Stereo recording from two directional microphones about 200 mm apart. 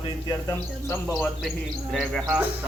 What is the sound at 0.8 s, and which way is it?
Speech, 10° left (ahead or behind).